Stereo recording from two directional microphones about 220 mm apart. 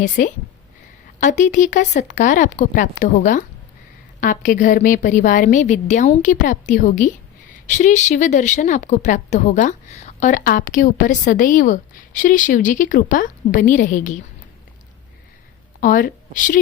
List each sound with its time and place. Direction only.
0.2 s speech: 40° left (ahead or behind)
15.8 s a woman's voice: 40° left (ahead or behind)